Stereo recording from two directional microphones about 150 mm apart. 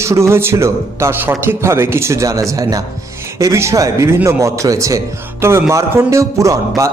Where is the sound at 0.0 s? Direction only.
20° right (ahead or behind).